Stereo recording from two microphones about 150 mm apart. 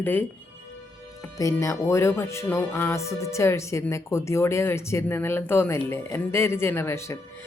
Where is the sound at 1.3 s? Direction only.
20° left (ahead or behind).